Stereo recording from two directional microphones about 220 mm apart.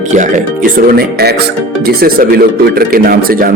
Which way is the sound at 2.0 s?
45° right (ahead or behind).